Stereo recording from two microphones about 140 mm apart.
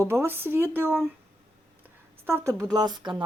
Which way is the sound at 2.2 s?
20° right (ahead or behind).